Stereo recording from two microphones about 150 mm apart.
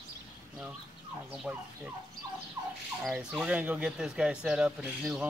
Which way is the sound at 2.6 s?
25° right (ahead or behind).